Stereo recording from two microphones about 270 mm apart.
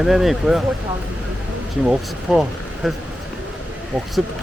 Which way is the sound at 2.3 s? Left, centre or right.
Centre.